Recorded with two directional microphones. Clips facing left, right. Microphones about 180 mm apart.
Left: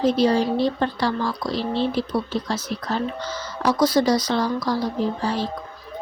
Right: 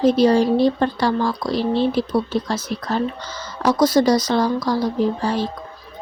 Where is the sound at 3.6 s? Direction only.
45° right (ahead or behind).